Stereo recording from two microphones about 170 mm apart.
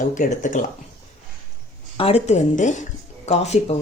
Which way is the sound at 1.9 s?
40° left (ahead or behind).